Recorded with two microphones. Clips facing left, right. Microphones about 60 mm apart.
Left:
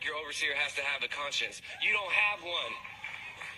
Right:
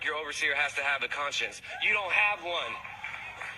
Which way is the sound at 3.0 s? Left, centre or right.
Right.